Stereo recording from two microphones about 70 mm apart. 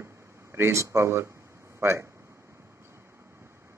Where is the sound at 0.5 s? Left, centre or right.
Right.